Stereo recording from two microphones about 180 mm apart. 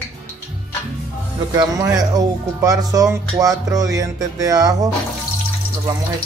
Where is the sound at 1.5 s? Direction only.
20° right (ahead or behind).